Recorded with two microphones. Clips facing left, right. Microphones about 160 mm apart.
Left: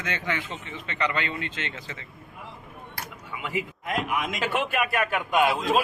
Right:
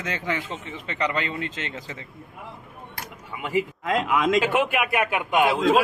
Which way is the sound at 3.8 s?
90° right.